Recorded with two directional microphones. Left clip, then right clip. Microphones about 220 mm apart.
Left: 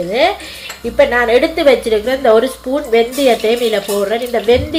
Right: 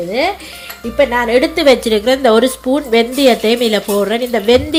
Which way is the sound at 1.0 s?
35° right (ahead or behind).